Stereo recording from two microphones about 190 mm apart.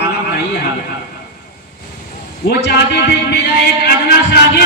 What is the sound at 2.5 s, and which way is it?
A man's voice, 60° left (ahead or behind).